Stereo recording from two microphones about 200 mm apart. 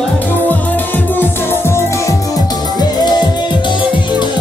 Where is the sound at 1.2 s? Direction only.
10° left (ahead or behind).